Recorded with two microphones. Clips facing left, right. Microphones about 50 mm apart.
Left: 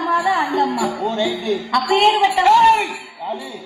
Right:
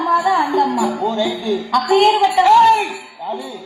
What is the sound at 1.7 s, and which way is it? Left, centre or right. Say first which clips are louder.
Speech: right 2 dB; left.